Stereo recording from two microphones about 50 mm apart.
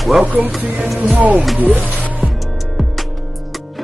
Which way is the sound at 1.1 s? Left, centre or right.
Right.